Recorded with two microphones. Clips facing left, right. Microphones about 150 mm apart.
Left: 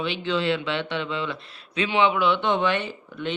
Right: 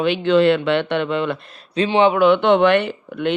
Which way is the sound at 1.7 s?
35° right (ahead or behind).